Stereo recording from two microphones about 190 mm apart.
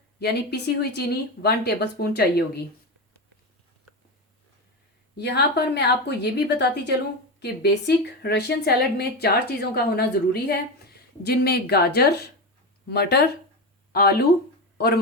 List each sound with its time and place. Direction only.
0.2 s a woman's voice: 60° left (ahead or behind)
5.1 s a woman's voice: 60° left (ahead or behind)